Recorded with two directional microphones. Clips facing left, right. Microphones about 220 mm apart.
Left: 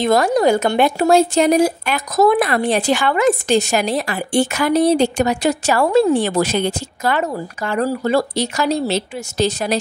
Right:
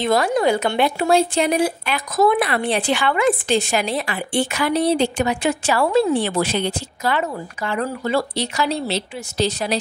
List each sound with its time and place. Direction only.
0.0 s speech: 40° left (ahead or behind)